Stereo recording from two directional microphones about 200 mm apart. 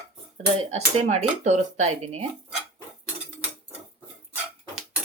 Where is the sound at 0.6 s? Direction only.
35° right (ahead or behind).